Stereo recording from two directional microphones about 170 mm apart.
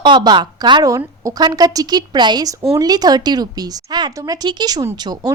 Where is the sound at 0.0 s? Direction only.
25° right (ahead or behind).